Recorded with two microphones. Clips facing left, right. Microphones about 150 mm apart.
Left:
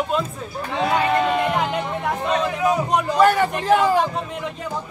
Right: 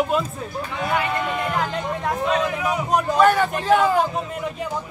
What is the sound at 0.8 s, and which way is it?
Speech, 30° left (ahead or behind).